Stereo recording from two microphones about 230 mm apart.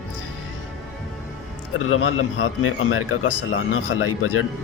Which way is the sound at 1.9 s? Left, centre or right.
Left.